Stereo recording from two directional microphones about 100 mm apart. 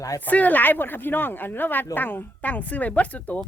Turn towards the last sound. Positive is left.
turn(degrees=15)  # may be behind; listen again after turning